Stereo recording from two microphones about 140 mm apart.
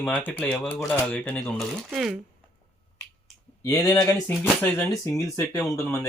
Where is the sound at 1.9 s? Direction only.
5° right (ahead or behind).